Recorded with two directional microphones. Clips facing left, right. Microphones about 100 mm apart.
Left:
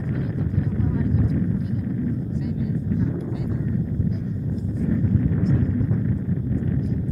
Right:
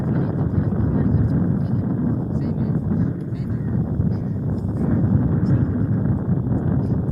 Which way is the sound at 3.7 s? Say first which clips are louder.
Right 2 dB; 55° right (ahead or behind).